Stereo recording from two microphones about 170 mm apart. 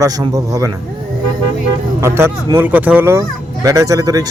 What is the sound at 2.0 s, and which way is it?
Speech, 15° right (ahead or behind).